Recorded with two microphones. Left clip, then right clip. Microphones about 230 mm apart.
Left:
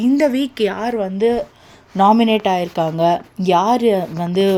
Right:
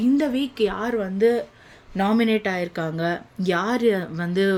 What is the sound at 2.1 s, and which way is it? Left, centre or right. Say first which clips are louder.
Speech: left 6 dB; left.